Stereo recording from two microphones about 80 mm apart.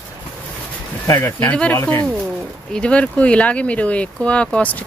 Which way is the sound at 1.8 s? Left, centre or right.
Left.